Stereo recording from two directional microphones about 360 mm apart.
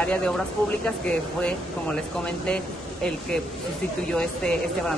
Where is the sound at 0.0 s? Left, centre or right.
Centre.